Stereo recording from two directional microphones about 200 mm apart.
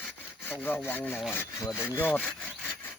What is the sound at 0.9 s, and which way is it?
Wood, 10° left (ahead or behind).